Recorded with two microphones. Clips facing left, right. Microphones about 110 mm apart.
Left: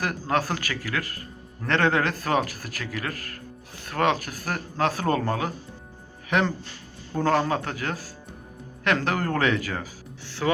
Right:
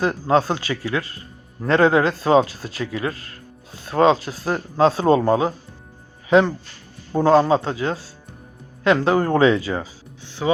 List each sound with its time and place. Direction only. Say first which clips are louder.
0.0 s speech: right 7 dB; 25° right (ahead or behind)
7.1 s speech: right 8 dB; 25° right (ahead or behind)